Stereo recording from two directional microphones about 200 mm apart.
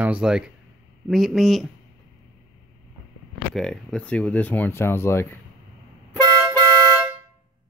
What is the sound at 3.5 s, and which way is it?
Speech, 5° left (ahead or behind).